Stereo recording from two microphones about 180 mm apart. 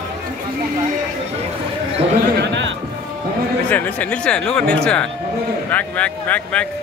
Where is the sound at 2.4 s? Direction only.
90° right.